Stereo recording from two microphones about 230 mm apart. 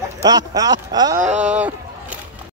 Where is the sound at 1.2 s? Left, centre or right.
Right.